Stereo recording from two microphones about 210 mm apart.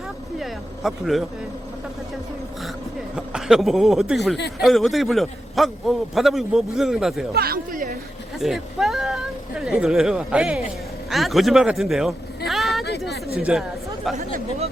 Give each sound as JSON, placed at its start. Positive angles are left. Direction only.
{"t": 0.3, "sound": "speech", "side_deg": 0}
{"t": 3.2, "sound": "a man's voice", "side_deg": -5}
{"t": 7.3, "sound": "speech", "side_deg": -45}
{"t": 8.4, "sound": "a man's voice", "side_deg": 0}
{"t": 12.5, "sound": "a sound", "side_deg": 0}
{"t": 13.4, "sound": "speech", "side_deg": 0}